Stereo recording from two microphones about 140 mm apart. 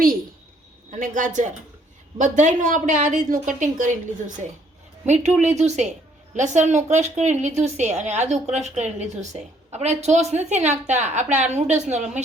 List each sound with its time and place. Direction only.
0.9 s a woman's voice: 65° right (ahead or behind)
5.4 s a woman's voice: 55° right (ahead or behind)